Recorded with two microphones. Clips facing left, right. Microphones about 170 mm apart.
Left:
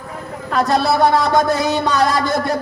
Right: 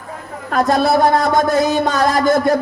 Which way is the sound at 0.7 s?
50° right (ahead or behind).